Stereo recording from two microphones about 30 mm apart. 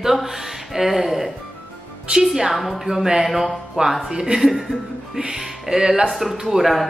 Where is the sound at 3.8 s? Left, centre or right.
Right.